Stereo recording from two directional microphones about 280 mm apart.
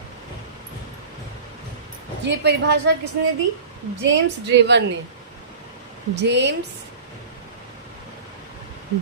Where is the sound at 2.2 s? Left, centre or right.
Right.